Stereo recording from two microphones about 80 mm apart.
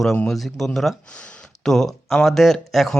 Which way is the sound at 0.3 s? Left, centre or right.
Centre.